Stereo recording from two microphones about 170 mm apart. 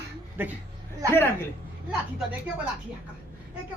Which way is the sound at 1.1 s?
15° left (ahead or behind).